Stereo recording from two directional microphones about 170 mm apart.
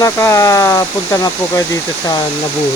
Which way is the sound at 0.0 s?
15° left (ahead or behind).